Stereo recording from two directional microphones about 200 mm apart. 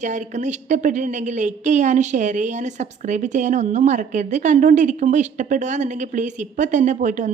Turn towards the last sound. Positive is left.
turn(degrees=-40)  # may be behind; listen again after turning